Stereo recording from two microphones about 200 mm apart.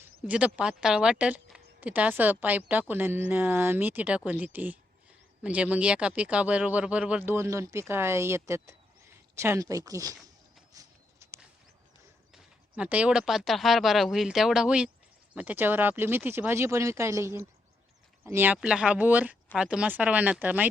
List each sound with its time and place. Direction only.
0.3 s speech: 5° right (ahead or behind)
10.7 s a sound: 15° right (ahead or behind)
12.3 s speech: 5° right (ahead or behind)